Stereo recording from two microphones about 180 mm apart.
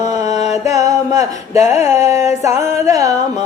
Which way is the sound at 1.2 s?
40° left (ahead or behind).